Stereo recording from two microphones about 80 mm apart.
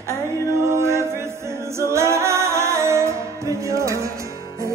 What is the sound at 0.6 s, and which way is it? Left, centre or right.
A capella, right.